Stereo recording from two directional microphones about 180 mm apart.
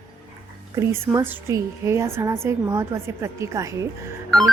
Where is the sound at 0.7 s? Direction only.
15° right (ahead or behind).